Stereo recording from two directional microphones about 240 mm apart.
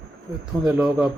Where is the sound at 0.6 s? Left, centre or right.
Centre.